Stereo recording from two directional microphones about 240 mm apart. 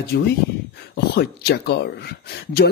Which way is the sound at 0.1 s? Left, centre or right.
Left.